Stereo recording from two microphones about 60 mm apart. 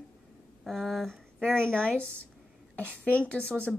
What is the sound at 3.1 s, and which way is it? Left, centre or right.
Speech, centre.